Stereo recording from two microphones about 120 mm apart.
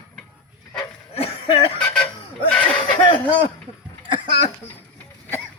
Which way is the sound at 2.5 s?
10° left (ahead or behind).